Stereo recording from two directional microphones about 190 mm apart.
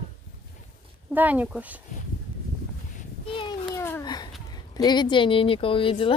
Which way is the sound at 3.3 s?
25° left (ahead or behind).